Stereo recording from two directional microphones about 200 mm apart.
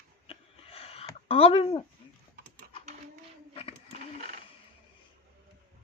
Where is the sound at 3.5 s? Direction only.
30° left (ahead or behind).